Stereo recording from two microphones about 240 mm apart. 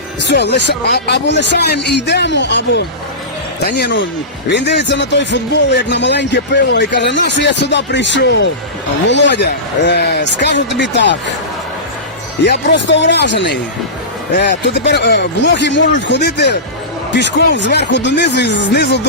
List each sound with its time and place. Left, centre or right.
0.3 s speech: left
12.5 s speech: left